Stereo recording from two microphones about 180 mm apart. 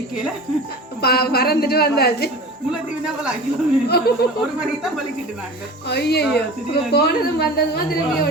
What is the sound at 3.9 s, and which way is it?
Speech, 60° left (ahead or behind).